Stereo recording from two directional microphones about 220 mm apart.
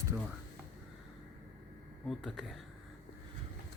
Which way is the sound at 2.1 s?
Centre (ahead or behind).